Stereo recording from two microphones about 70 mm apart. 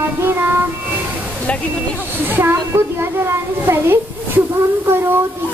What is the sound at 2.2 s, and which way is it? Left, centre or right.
A child's voice, right.